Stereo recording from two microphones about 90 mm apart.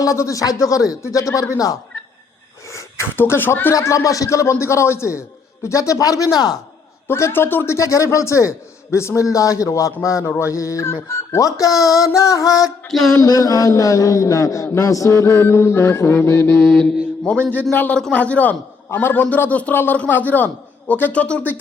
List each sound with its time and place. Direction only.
0.0 s a man's voice: 35° left (ahead or behind)
2.7 s a man's voice: 30° left (ahead or behind)
7.1 s a man's voice: 25° left (ahead or behind)
12.9 s a sound: 5° left (ahead or behind)
13.1 s a man's voice: 40° left (ahead or behind)
16.6 s mantra: 5° left (ahead or behind)
17.5 s a man's voice: 20° left (ahead or behind)